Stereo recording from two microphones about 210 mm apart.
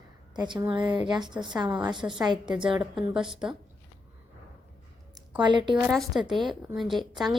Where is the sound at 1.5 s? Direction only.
20° right (ahead or behind).